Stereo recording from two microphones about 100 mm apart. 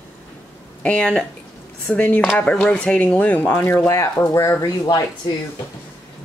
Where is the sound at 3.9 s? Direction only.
30° left (ahead or behind).